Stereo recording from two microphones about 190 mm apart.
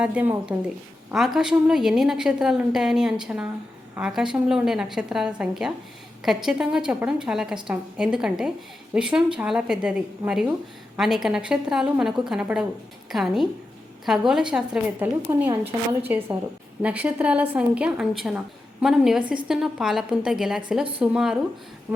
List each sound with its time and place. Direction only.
0.0 s a woman's voice: 5° right (ahead or behind)